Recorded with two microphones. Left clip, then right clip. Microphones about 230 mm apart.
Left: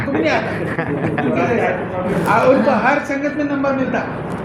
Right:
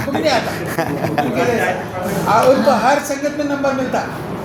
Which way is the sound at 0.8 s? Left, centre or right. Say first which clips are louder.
Right 4 dB; right.